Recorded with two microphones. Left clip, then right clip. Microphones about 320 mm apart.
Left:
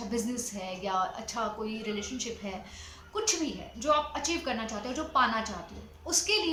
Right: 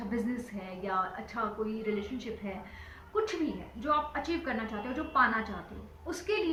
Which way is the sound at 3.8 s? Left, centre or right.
Centre.